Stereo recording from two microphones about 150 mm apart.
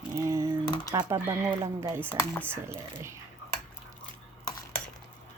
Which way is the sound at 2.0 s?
10° left (ahead or behind).